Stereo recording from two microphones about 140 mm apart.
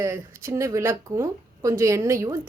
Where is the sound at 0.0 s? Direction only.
15° right (ahead or behind).